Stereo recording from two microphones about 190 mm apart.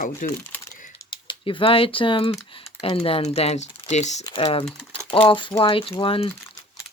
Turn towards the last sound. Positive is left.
turn(degrees=30)  # may be behind; listen again after turning